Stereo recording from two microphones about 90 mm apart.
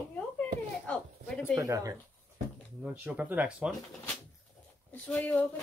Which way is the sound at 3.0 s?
20° right (ahead or behind).